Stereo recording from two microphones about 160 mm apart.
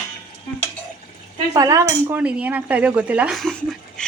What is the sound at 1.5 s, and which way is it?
Speech, 20° right (ahead or behind).